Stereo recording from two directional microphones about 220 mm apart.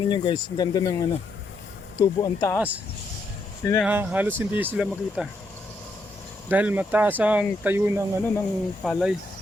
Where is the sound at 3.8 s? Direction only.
10° right (ahead or behind).